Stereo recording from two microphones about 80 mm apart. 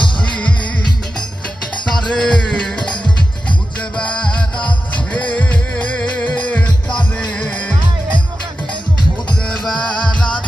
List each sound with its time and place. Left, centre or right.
0.2 s music: centre
1.9 s music: centre
5.1 s music: centre
9.5 s music: centre